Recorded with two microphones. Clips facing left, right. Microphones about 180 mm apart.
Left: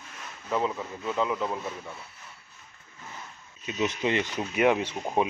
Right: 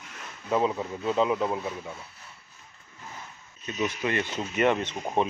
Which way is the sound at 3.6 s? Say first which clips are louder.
Left 1 dB; 20° left (ahead or behind).